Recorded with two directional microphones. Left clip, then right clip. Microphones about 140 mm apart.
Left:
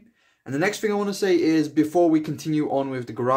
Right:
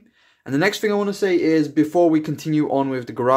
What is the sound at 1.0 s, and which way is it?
Speech, 30° right (ahead or behind).